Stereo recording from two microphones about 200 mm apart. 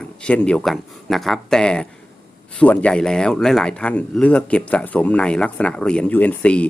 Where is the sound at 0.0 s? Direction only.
5° left (ahead or behind).